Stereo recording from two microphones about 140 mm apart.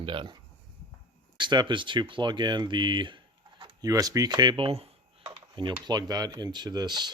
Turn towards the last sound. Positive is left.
turn(degrees=-30)  # may be behind; listen again after turning